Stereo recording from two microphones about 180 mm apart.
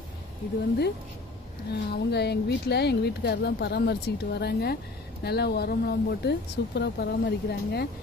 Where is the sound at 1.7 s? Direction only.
70° left (ahead or behind).